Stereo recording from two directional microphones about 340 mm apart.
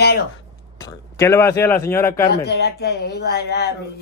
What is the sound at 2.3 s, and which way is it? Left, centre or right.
Speech, left.